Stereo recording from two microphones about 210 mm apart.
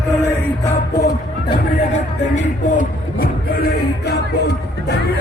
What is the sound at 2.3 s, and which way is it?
Music, 40° left (ahead or behind).